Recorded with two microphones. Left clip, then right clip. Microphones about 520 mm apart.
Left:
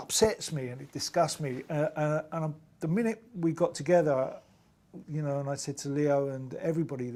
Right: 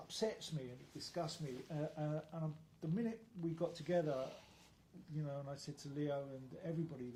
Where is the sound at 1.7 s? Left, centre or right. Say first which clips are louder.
Left 15 dB; left.